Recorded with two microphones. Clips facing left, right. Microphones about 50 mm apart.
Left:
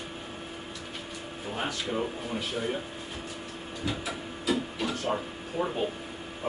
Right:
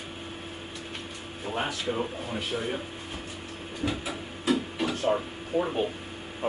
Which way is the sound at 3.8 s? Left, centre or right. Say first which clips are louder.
Right 2 dB; right.